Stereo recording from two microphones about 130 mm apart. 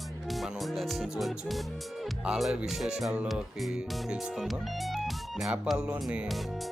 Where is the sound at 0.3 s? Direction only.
Centre (ahead or behind).